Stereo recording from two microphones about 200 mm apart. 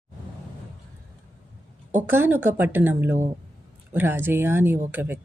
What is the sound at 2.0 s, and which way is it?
Speech, 10° right (ahead or behind).